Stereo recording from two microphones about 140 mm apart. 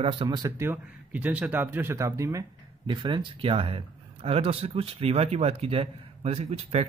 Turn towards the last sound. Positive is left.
turn(degrees=-45)  # may be behind; listen again after turning